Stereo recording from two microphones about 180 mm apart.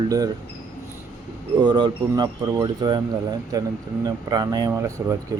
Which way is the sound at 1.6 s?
25° right (ahead or behind).